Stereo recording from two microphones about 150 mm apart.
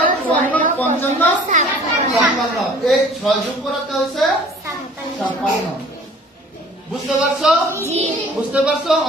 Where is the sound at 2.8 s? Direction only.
Centre (ahead or behind).